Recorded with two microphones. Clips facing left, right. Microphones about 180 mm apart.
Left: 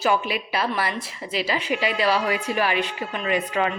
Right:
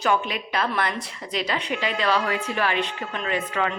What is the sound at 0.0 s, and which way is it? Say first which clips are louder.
A woman's voice: left 1 dB; 5° left (ahead or behind).